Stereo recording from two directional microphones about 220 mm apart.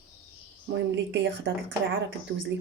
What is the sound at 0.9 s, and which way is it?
Speech, 55° right (ahead or behind).